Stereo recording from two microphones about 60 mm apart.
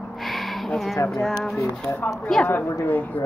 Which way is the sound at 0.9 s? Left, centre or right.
Left.